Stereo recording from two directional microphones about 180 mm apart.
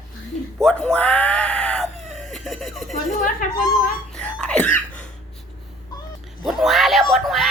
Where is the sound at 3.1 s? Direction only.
45° left (ahead or behind).